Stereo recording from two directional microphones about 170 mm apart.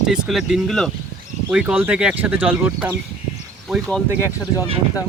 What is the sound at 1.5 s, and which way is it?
Speech, 10° right (ahead or behind).